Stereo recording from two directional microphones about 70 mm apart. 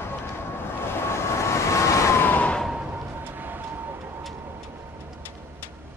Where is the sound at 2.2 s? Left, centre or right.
Left.